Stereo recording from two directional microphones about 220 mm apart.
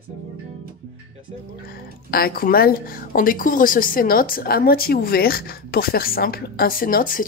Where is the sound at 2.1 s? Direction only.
40° left (ahead or behind).